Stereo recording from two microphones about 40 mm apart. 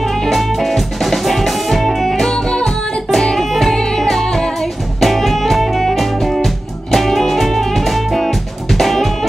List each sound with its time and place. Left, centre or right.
0.0 s music: centre
2.3 s music: centre
3.1 s music: centre